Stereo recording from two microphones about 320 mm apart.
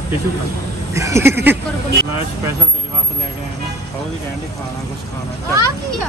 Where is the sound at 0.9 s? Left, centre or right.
Centre.